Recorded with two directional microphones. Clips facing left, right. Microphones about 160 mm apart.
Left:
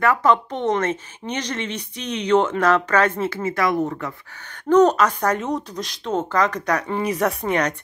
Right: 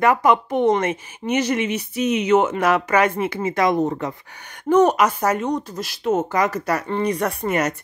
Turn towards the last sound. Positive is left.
turn(degrees=-5)  # may be behind; listen again after turning